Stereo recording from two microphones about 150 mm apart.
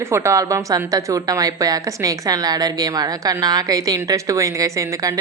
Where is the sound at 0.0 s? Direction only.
20° right (ahead or behind).